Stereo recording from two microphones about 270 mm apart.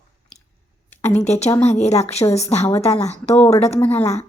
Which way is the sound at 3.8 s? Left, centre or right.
Centre.